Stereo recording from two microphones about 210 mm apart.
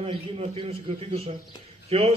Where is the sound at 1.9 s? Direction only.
25° right (ahead or behind).